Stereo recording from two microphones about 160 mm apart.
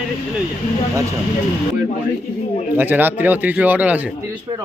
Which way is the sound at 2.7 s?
10° right (ahead or behind).